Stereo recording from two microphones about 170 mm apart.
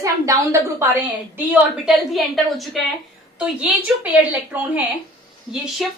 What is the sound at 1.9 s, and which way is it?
A woman's voice, centre (ahead or behind).